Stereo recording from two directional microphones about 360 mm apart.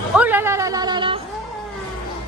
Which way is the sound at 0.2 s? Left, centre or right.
Centre.